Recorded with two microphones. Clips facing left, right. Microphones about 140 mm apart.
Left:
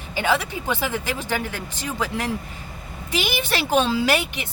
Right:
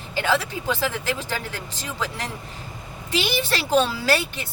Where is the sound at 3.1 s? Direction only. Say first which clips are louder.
Even; 15° left (ahead or behind).